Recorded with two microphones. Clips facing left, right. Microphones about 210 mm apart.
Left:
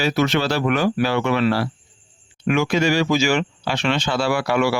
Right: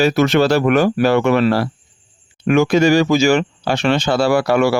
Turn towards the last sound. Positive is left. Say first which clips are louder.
# right 5 dB
turn(degrees=-40)  # may be behind; listen again after turning